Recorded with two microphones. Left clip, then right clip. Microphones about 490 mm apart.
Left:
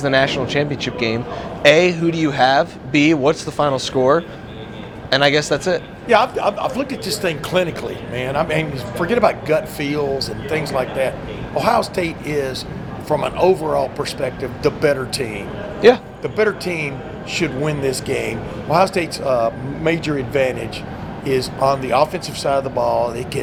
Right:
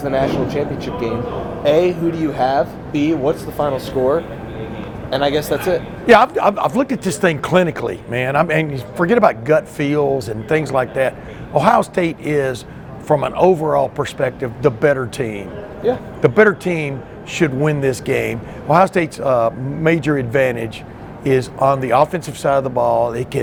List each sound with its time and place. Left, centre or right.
0.0 s speech: left
6.1 s speech: right